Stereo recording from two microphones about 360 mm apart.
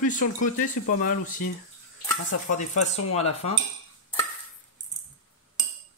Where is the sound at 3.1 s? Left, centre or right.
Centre.